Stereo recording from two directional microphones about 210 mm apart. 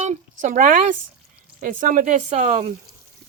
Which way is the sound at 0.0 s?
35° right (ahead or behind).